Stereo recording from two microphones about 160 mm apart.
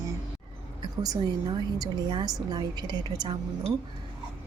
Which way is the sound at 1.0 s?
25° right (ahead or behind).